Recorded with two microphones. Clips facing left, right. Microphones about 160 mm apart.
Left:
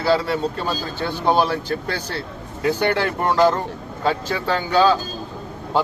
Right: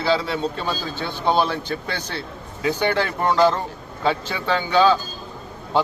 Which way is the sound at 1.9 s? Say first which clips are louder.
Left 2 dB; 45° left (ahead or behind).